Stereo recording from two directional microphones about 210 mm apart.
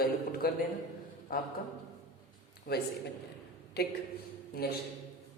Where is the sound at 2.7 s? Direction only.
45° left (ahead or behind).